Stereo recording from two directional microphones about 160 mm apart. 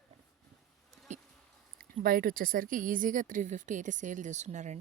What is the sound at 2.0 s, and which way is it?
Speech, 60° right (ahead or behind).